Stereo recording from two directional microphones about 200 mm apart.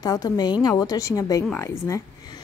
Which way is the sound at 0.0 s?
20° left (ahead or behind).